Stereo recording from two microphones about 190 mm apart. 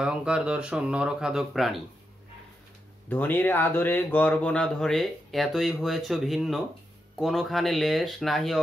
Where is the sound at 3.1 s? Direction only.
10° left (ahead or behind).